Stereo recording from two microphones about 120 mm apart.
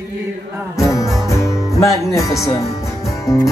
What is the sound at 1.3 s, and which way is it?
Speech, 25° left (ahead or behind).